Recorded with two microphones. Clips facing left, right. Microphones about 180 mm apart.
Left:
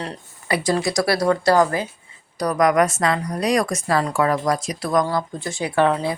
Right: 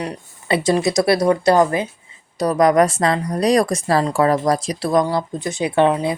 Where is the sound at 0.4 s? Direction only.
25° right (ahead or behind).